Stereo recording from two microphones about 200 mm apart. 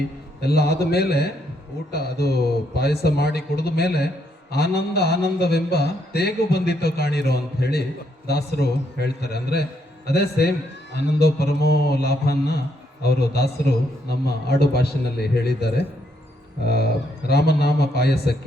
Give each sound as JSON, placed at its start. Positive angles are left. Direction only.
{"t": 0.4, "sound": "a man's voice", "side_deg": 55}